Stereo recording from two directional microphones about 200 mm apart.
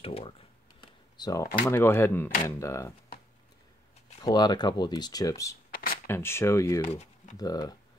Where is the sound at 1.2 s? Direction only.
20° left (ahead or behind).